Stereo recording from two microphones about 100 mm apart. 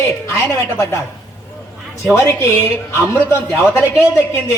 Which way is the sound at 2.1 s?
25° left (ahead or behind).